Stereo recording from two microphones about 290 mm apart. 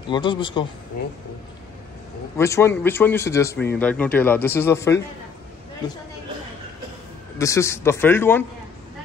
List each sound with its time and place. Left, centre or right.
0.1 s a man's voice: centre
2.3 s a man's voice: centre
7.3 s a man's voice: centre